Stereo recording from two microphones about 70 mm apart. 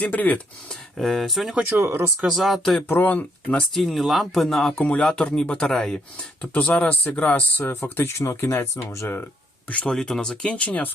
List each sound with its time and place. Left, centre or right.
0.0 s speech: left
0.7 s speech: centre
1.7 s speech: right
2.2 s speech: centre
2.9 s speech: left
3.8 s speech: centre
6.4 s speech: left
7.7 s speech: left
9.6 s speech: centre